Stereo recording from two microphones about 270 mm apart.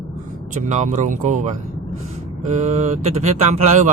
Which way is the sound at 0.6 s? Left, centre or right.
Right.